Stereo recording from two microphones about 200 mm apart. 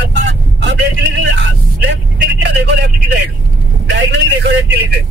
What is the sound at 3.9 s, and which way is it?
Vehicle, 60° right (ahead or behind).